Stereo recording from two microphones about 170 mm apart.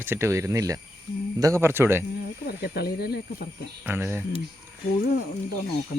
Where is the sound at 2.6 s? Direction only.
70° left (ahead or behind).